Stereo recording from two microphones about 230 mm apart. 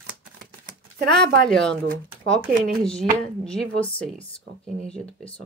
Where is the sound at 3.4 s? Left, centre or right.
Centre.